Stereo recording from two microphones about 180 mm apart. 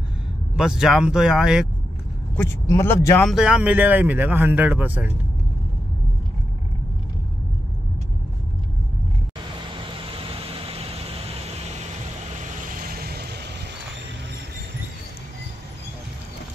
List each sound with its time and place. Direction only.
0.6 s speech: 5° right (ahead or behind)
2.3 s speech: 15° left (ahead or behind)
3.3 s a man's voice: 5° right (ahead or behind)
10.0 s vehicle: 30° right (ahead or behind)
12.4 s vehicle: 50° right (ahead or behind); by 13.5 s 65° right (ahead or behind)